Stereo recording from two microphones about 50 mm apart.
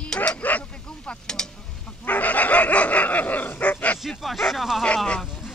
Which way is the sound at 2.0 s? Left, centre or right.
Left.